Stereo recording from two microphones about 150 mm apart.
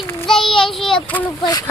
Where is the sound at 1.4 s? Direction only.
30° left (ahead or behind).